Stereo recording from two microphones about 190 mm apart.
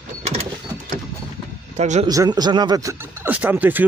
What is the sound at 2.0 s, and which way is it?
Speech, 20° right (ahead or behind).